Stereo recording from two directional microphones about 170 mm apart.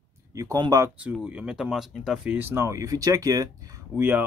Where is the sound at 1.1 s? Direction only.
5° right (ahead or behind).